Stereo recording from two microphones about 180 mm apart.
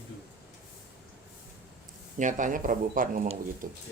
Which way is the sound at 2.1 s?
45° right (ahead or behind).